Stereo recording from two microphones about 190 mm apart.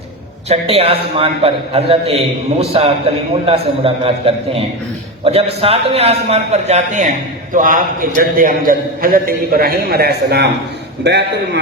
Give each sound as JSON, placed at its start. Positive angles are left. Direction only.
{"t": 0.4, "sound": "a man's voice", "side_deg": -35}